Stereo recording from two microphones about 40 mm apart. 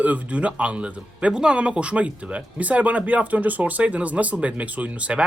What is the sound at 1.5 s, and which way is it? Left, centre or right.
Speech, right.